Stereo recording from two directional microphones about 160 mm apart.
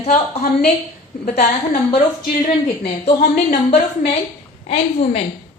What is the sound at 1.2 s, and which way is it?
Speech, 65° left (ahead or behind).